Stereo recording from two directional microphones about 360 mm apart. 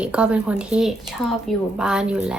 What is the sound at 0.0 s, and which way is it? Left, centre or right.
Speech, centre.